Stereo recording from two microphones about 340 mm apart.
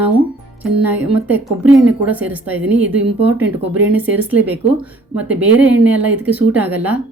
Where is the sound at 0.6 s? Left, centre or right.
Centre.